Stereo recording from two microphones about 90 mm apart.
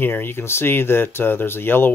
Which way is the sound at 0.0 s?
25° left (ahead or behind).